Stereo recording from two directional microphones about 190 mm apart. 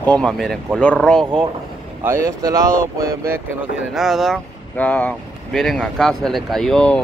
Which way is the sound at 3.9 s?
Centre (ahead or behind).